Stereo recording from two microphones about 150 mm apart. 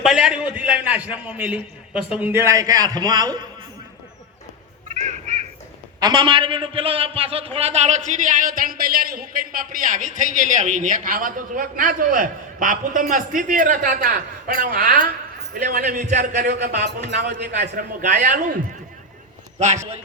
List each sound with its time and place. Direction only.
0.0 s a man's voice: 5° right (ahead or behind); by 3.4 s 25° right (ahead or behind)
4.9 s honk: 50° right (ahead or behind)
6.0 s a man's voice: 30° right (ahead or behind); by 16.8 s 90° right
17.0 s a man's voice: 55° right (ahead or behind)
19.5 s a man's voice: 50° right (ahead or behind)